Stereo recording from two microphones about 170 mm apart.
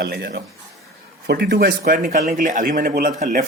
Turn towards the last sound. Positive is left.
turn(degrees=-50)  # may be behind; listen again after turning